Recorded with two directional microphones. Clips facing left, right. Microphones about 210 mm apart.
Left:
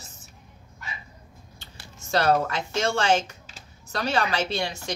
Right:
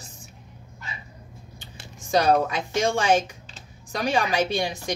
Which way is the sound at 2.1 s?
15° right (ahead or behind).